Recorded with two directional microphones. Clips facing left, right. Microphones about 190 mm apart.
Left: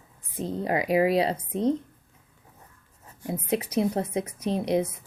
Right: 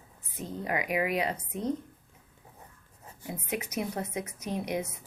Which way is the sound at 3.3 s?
30° left (ahead or behind).